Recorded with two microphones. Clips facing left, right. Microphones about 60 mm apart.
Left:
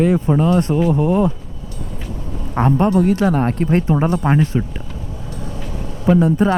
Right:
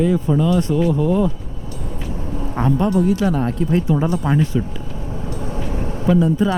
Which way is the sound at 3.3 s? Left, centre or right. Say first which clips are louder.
Left 2 dB; left.